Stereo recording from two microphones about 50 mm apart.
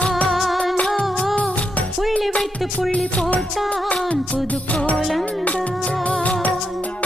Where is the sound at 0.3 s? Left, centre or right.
Centre.